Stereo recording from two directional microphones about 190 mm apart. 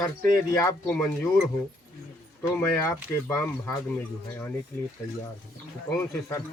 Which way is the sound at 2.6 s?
15° left (ahead or behind).